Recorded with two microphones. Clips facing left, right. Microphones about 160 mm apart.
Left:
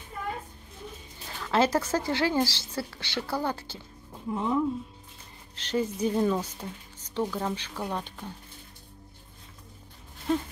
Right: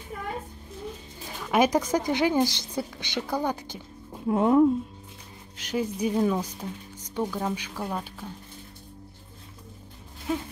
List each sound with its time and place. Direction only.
1.3 s speech: 15° right (ahead or behind)
4.3 s a woman's voice: 60° right (ahead or behind)
5.6 s speech: 10° right (ahead or behind)
10.3 s speech: 5° right (ahead or behind)